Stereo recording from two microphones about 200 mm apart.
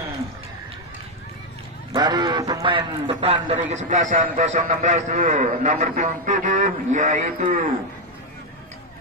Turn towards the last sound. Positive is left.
turn(degrees=-40)  # may be behind; listen again after turning